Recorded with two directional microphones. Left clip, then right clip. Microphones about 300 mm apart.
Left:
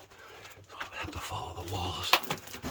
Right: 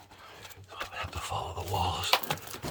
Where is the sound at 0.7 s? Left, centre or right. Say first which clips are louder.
Right 2 dB; centre.